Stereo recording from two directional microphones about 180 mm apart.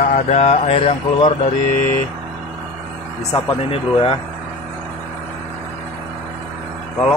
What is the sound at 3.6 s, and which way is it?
Speech, 30° left (ahead or behind).